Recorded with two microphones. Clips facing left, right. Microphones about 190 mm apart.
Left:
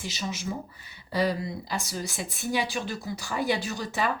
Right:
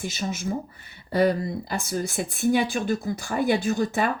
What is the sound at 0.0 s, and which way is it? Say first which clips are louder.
A woman's voice: right 4 dB; 50° right (ahead or behind).